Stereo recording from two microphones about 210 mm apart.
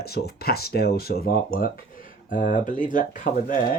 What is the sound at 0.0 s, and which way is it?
Speech, 50° left (ahead or behind).